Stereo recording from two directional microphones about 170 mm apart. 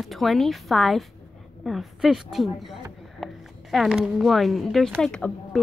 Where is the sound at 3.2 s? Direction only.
Centre (ahead or behind).